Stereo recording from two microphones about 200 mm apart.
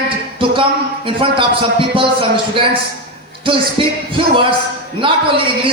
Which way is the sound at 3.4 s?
25° right (ahead or behind).